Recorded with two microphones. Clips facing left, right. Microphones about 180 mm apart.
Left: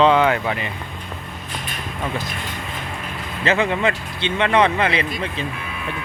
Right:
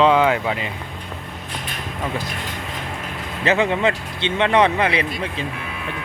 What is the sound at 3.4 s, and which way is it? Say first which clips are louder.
Speech: right 1 dB; 20° right (ahead or behind).